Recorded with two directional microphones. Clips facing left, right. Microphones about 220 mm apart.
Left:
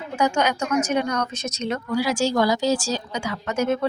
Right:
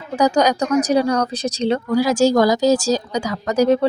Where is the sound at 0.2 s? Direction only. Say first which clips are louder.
Right 6 dB; 35° right (ahead or behind).